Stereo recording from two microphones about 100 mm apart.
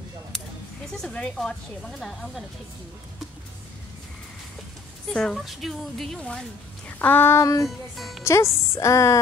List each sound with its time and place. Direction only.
0.9 s a woman's voice: 10° left (ahead or behind)
5.1 s a woman's voice: 5° left (ahead or behind)
7.0 s a sound: 20° left (ahead or behind)
7.6 s a woman's voice: centre (ahead or behind)
8.2 s a sound: 30° left (ahead or behind)
8.7 s speech: 30° left (ahead or behind)